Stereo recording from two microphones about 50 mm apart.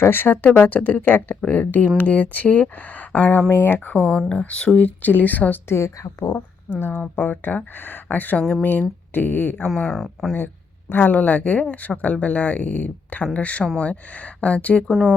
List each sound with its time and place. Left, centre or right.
0.0 s speech: left
0.4 s speech: left
1.4 s speech: left
3.5 s speech: left
3.9 s speech: left
5.6 s a woman's voice: left
6.7 s speech: centre
7.2 s speech: left
9.6 s speech: centre
10.3 s a sound: left
11.1 s speech: left